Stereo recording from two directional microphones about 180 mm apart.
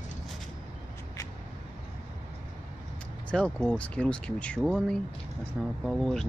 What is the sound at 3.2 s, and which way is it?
Speech, 5° left (ahead or behind).